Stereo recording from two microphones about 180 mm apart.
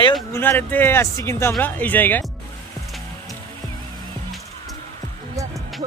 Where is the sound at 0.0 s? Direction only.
25° left (ahead or behind).